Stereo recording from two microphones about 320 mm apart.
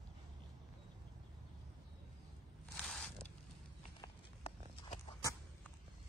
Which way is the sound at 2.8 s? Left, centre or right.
Centre.